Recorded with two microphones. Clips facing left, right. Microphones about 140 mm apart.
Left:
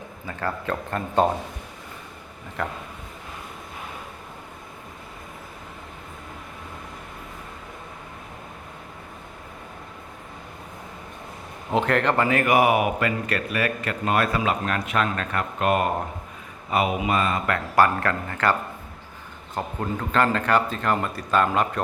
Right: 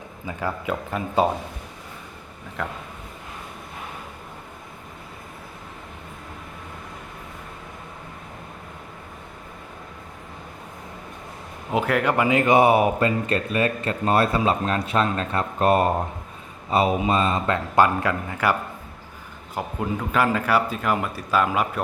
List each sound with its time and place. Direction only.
0.3 s speech: 10° right (ahead or behind)
2.6 s a man's voice: centre (ahead or behind)
11.7 s speech: 5° right (ahead or behind)
19.5 s speech: 10° right (ahead or behind)